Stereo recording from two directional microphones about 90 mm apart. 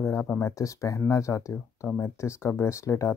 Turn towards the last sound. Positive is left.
turn(degrees=30)  # may be behind; listen again after turning